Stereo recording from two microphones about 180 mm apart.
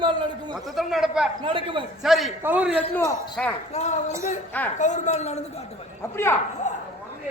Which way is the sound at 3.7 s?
40° left (ahead or behind).